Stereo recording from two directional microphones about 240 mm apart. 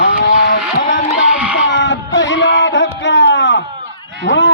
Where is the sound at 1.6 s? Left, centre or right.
Left.